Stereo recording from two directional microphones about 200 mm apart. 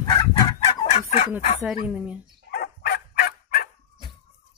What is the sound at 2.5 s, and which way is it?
Dog, 50° left (ahead or behind).